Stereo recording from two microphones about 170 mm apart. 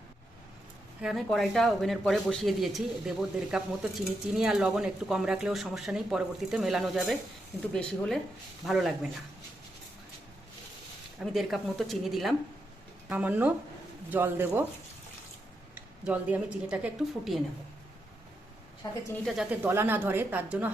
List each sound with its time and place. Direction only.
1.0 s speech: centre (ahead or behind)
11.2 s a woman's voice: centre (ahead or behind)
15.7 s speech: 10° right (ahead or behind)
19.1 s speech: centre (ahead or behind)
19.5 s a woman's voice: 15° right (ahead or behind)